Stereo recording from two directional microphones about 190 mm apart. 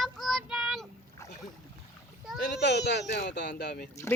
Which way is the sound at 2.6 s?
65° left (ahead or behind).